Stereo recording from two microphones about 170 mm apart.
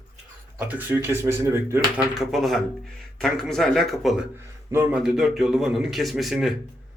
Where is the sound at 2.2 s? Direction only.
Centre (ahead or behind).